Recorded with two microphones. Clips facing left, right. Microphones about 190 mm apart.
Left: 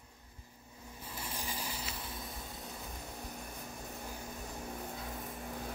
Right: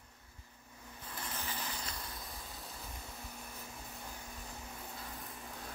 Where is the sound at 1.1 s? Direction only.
10° left (ahead or behind).